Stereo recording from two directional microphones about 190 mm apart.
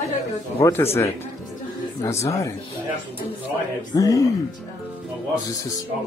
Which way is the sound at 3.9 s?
15° left (ahead or behind).